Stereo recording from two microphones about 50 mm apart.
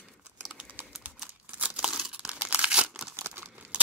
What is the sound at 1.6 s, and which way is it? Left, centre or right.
Crumpling, right.